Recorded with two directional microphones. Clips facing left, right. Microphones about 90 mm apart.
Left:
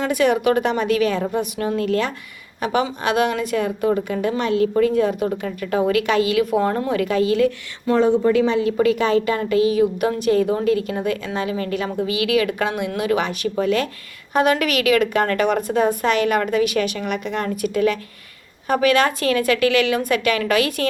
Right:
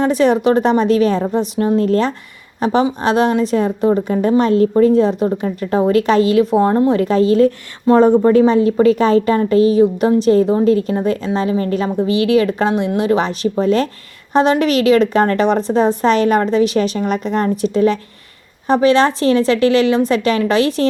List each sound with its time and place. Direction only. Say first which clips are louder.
0.0 s a woman's voice: right 5 dB; 30° right (ahead or behind)